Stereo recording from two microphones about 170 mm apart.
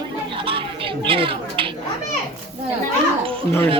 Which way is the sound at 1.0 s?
30° right (ahead or behind).